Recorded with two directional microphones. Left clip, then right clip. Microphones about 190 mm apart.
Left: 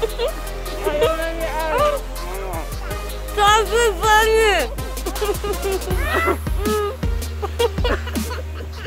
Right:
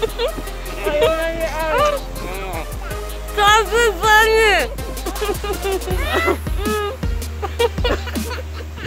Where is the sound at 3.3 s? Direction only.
25° left (ahead or behind).